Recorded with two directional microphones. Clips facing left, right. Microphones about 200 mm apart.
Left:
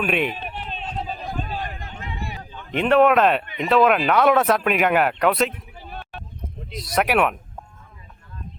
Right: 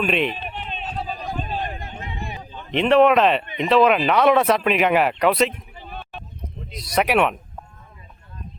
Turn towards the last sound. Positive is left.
turn(degrees=5)  # may be behind; listen again after turning